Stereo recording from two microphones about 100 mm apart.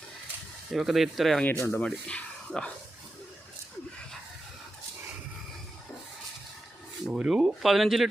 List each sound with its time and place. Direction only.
0.7 s speech: 5° right (ahead or behind)
1.5 s speech: 25° left (ahead or behind)
1.7 s speech: 10° left (ahead or behind)
7.1 s speech: 10° right (ahead or behind)